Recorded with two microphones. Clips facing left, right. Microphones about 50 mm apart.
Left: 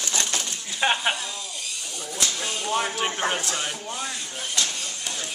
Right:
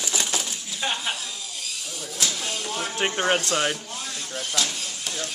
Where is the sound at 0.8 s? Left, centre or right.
Left.